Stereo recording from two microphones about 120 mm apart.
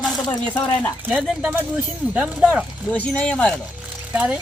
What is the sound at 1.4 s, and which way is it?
Speech, 15° right (ahead or behind).